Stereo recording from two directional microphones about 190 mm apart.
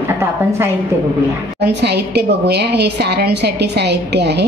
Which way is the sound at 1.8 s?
60° right (ahead or behind).